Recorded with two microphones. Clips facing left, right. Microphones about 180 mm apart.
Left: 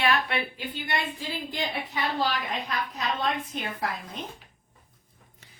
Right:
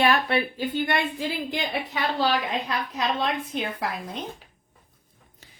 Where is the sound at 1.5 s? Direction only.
75° right (ahead or behind).